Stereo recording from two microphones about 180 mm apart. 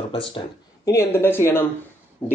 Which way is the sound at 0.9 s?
15° left (ahead or behind).